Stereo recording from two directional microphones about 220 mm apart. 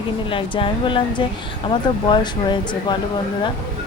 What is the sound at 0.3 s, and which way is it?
Speech, 25° left (ahead or behind).